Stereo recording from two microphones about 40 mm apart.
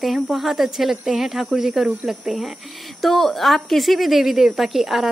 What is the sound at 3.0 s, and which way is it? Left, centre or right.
Speech, centre.